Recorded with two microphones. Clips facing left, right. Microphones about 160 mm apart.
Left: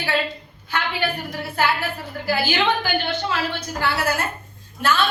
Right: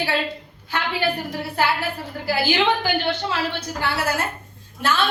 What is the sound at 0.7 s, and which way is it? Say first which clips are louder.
A woman's voice: right 1 dB; 35° right (ahead or behind).